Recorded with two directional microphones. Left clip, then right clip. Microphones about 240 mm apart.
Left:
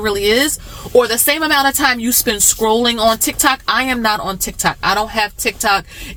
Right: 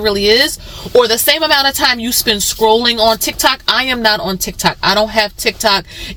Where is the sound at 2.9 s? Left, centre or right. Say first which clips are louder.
Right 2 dB; centre.